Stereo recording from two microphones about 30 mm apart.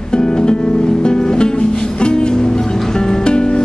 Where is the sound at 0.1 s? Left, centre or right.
Left.